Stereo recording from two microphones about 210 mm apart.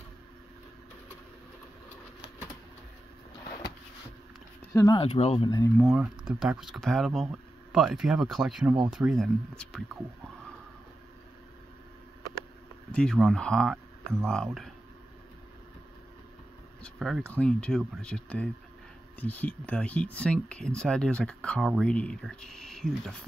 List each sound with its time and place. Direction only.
4.7 s speech: 20° left (ahead or behind)
5.9 s speech: 15° right (ahead or behind)
6.4 s speech: 5° right (ahead or behind)
12.9 s speech: 5° left (ahead or behind)
16.8 s speech: centre (ahead or behind)